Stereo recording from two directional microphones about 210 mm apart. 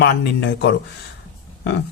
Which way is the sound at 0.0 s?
55° left (ahead or behind).